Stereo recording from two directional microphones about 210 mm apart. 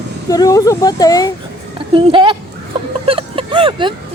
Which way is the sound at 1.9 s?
25° right (ahead or behind).